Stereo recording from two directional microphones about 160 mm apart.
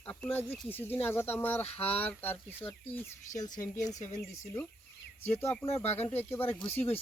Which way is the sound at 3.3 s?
50° left (ahead or behind).